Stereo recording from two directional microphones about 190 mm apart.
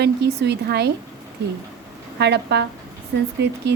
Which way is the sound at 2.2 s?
65° right (ahead or behind).